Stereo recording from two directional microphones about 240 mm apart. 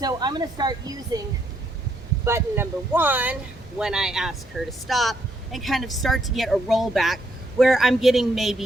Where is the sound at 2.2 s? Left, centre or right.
Centre.